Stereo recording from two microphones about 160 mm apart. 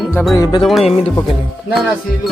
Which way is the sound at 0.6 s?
Centre (ahead or behind).